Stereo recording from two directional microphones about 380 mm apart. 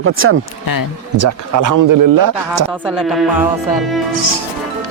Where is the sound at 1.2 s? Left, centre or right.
Right.